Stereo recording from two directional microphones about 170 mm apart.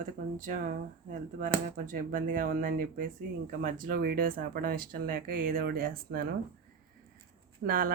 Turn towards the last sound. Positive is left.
turn(degrees=-55)  # may be behind; listen again after turning